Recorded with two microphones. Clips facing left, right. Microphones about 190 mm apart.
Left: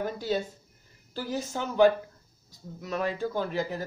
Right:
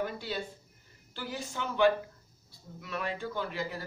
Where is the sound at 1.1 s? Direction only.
40° left (ahead or behind).